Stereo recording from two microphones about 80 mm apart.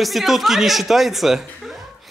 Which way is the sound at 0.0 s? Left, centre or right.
Centre.